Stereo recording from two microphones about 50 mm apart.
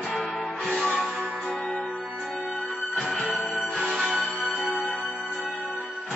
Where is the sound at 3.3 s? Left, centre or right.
Centre.